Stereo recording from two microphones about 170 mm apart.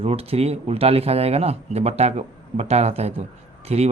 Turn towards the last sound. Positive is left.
turn(degrees=-40)  # may be behind; listen again after turning